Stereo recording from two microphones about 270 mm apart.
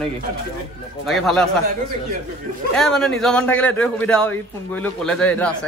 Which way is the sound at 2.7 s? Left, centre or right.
Centre.